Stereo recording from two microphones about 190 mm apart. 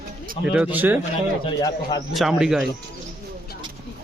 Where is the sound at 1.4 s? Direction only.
20° left (ahead or behind).